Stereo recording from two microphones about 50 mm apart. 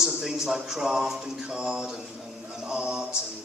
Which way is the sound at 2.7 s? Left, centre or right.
Centre.